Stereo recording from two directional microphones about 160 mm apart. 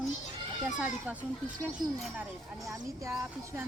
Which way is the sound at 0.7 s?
5° right (ahead or behind).